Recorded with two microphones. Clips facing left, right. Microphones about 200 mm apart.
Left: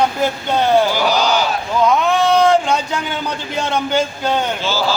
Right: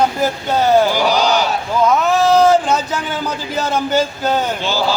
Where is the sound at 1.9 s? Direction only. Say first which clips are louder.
Right 2 dB; 5° right (ahead or behind).